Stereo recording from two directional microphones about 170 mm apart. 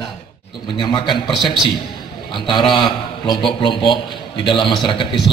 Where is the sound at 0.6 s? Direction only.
25° left (ahead or behind).